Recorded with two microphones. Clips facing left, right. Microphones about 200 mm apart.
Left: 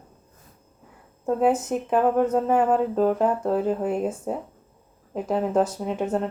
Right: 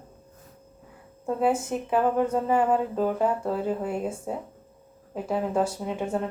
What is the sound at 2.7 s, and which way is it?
Music, 40° left (ahead or behind).